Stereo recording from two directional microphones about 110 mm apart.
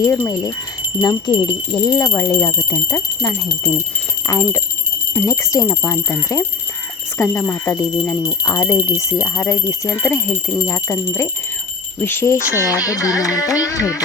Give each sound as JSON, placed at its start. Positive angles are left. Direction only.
{"t": 0.0, "sound": "speech", "side_deg": 25}
{"t": 1.0, "sound": "speech", "side_deg": 35}
{"t": 12.6, "sound": "carnatic music", "side_deg": 30}